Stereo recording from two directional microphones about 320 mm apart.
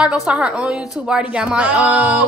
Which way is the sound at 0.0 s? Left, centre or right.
Centre.